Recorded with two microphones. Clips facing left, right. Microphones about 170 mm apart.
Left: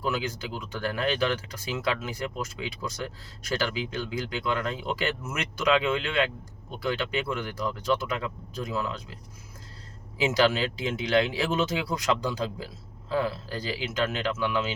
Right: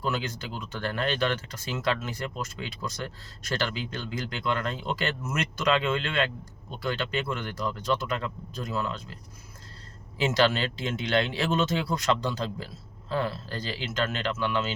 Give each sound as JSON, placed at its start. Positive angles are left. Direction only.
{"t": 0.0, "sound": "speech", "side_deg": 10}
{"t": 10.2, "sound": "speech", "side_deg": 10}